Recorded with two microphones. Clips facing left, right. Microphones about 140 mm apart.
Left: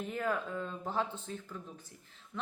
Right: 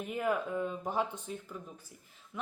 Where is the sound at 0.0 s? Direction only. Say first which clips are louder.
Right 2 dB; 15° right (ahead or behind).